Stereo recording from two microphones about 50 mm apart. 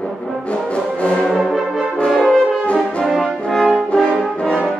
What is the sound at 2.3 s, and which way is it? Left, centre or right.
Brass instrument, centre.